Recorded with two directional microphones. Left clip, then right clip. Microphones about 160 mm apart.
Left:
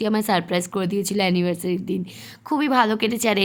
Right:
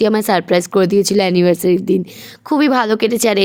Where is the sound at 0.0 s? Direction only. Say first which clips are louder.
Right 8 dB; 40° right (ahead or behind).